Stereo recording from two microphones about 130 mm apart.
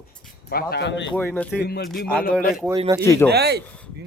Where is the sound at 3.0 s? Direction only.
20° left (ahead or behind).